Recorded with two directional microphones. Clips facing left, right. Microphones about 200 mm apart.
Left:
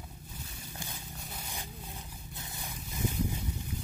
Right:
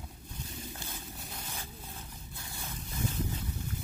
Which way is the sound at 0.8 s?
15° left (ahead or behind).